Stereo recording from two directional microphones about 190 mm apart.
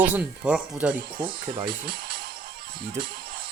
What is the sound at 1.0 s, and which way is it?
Speech, 50° right (ahead or behind).